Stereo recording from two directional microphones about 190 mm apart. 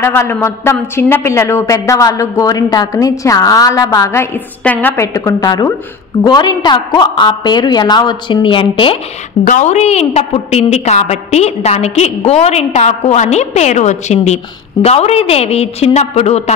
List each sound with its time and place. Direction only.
0.0 s a woman's voice: 15° left (ahead or behind)
9.5 s a woman's voice: 40° left (ahead or behind)